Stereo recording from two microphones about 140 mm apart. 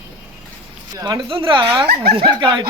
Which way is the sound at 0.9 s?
30° right (ahead or behind).